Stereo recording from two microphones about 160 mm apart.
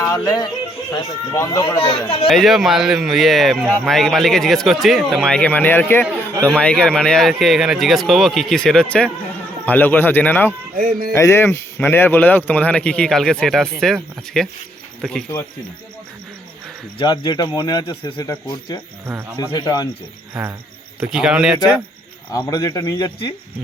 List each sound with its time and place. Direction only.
0.0 s speech: 20° left (ahead or behind)
2.2 s speech: centre (ahead or behind)
10.8 s music: 60° right (ahead or behind)
11.1 s speech: 15° left (ahead or behind)
17.0 s speech: 25° left (ahead or behind)
19.0 s speech: 15° right (ahead or behind)
19.4 s speech: 25° left (ahead or behind)
20.3 s speech: 10° right (ahead or behind)
22.4 s speech: 20° left (ahead or behind)